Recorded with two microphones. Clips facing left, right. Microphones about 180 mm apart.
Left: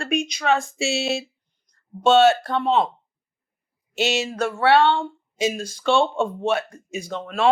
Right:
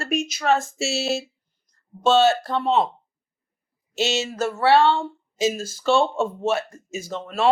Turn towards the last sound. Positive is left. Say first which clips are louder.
# left 1 dB
turn(degrees=0)  # may be behind; listen again after turning